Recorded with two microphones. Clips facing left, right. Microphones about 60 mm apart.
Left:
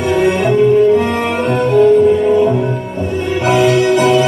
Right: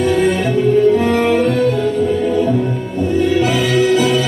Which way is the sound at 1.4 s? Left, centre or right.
Left.